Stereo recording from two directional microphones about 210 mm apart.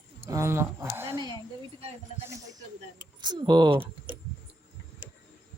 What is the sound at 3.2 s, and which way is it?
Speech, 20° right (ahead or behind).